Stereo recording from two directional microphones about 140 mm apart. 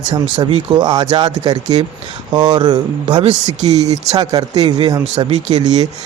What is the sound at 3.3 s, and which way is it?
Speech, 55° right (ahead or behind).